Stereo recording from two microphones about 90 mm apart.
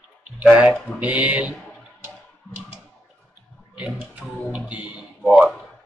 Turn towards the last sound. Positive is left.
turn(degrees=-15)  # may be behind; listen again after turning